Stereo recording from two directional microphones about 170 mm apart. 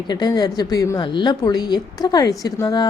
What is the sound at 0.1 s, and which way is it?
A woman's voice, 25° left (ahead or behind).